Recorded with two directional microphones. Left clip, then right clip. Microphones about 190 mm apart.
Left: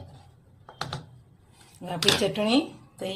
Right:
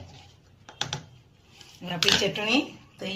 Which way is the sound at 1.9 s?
50° left (ahead or behind).